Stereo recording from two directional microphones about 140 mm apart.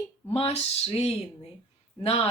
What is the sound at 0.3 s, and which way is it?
Speech, 50° left (ahead or behind).